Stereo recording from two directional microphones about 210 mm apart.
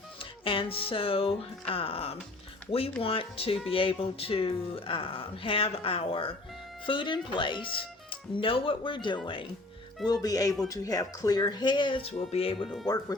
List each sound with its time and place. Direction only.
0.2 s music: 25° left (ahead or behind)
3.0 s speech: 25° left (ahead or behind)
12.6 s speech: centre (ahead or behind)